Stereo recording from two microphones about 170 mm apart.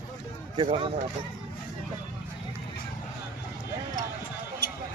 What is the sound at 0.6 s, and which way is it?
Speech, 30° right (ahead or behind).